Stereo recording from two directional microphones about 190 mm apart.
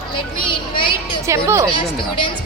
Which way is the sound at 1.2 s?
15° right (ahead or behind).